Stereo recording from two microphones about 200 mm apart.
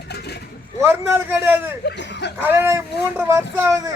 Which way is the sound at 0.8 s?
10° right (ahead or behind).